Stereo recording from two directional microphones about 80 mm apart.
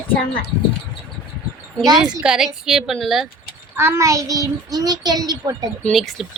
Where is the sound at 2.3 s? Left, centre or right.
Centre.